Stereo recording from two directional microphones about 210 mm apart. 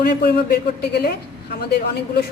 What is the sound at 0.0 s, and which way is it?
A woman's voice, 50° left (ahead or behind).